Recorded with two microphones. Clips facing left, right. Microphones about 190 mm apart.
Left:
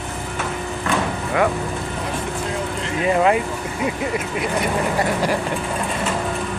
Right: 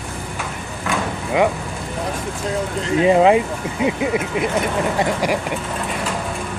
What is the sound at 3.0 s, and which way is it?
Speech, 25° right (ahead or behind).